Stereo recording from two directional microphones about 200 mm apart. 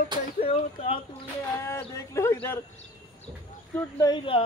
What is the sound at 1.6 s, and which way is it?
Speech, 15° left (ahead or behind).